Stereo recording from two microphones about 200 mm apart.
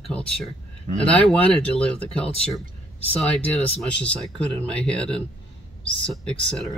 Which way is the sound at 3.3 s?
5° left (ahead or behind).